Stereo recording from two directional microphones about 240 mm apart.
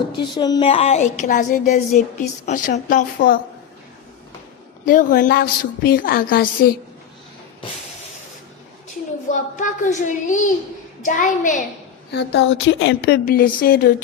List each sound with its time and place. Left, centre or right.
0.2 s a woman's voice: centre; by 3.4 s left
4.9 s a woman's voice: left
9.3 s a woman's voice: left
12.1 s speech: left
13.2 s a woman's voice: left